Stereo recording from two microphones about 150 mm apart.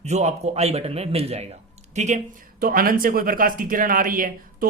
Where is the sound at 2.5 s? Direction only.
80° right.